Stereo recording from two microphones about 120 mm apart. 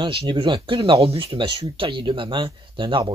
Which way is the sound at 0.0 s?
40° right (ahead or behind).